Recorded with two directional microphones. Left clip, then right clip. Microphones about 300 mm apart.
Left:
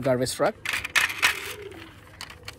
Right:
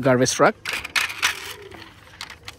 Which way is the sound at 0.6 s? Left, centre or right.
Centre.